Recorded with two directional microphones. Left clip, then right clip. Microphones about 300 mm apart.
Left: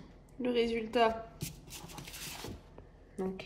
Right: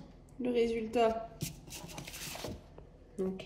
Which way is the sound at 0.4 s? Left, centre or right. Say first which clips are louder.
Even; centre.